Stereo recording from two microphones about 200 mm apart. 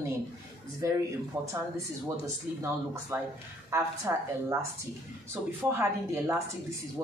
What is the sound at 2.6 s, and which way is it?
Speech, 10° right (ahead or behind).